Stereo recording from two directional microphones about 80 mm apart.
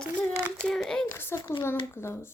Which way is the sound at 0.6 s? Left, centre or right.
Centre.